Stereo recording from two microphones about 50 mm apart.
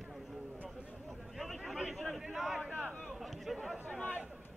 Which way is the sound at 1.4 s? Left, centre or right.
Centre.